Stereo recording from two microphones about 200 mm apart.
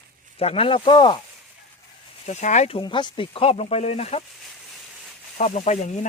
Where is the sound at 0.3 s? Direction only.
30° left (ahead or behind).